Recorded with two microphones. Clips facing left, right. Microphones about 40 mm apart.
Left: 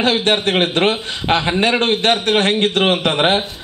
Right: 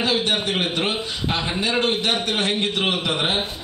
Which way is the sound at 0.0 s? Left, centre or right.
Left.